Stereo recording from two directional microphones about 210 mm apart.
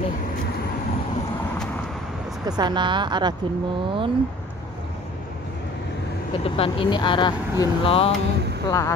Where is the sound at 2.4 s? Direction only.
20° right (ahead or behind).